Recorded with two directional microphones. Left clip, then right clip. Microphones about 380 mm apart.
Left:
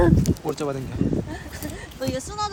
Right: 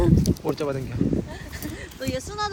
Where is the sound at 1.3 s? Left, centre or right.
Left.